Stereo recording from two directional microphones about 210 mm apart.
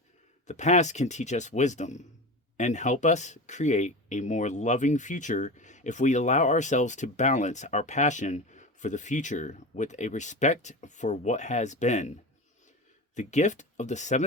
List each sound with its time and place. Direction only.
0.4 s speech: 35° left (ahead or behind)
13.1 s speech: 35° left (ahead or behind)